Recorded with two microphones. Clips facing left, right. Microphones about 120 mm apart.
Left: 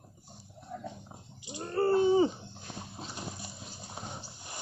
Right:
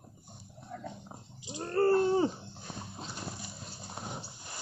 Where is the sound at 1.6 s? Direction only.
5° left (ahead or behind).